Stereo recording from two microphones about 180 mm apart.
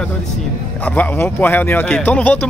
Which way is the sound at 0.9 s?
10° left (ahead or behind).